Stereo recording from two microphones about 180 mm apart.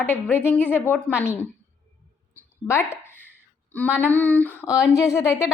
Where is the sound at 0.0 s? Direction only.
10° left (ahead or behind).